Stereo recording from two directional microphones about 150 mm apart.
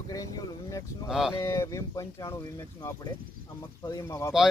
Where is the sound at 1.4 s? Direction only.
20° left (ahead or behind).